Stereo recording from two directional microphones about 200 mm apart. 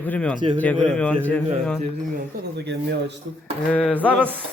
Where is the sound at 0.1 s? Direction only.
5° left (ahead or behind).